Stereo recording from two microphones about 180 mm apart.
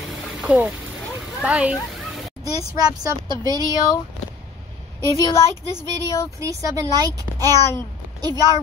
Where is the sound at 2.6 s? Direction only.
20° right (ahead or behind).